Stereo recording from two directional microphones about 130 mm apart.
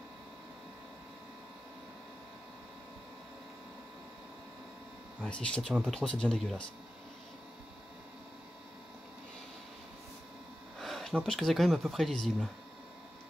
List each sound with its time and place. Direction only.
5.2 s speech: 5° left (ahead or behind)
10.8 s speech: centre (ahead or behind)